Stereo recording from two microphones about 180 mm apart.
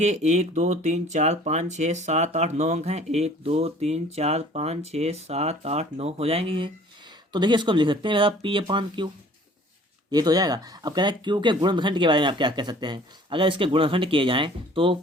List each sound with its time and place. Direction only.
0.0 s speech: 40° right (ahead or behind)
10.1 s speech: 20° right (ahead or behind)